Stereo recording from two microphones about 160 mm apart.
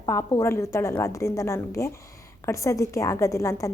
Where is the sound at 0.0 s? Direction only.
20° left (ahead or behind).